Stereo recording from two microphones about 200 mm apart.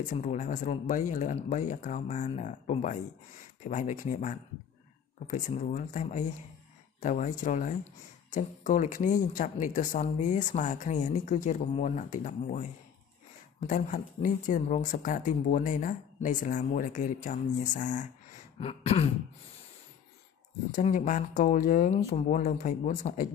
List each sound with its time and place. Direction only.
0.1 s speech: 40° left (ahead or behind)
20.7 s speech: 40° left (ahead or behind)